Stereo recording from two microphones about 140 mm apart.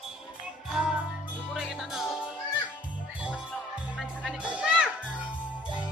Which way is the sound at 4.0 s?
5° right (ahead or behind).